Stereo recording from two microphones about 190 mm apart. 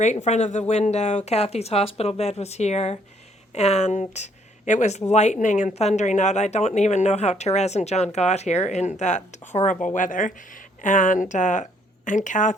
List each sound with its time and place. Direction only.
0.0 s a woman's voice: 40° left (ahead or behind)